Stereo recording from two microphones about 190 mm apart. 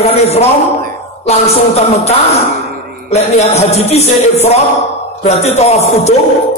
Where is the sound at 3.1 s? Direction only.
35° left (ahead or behind).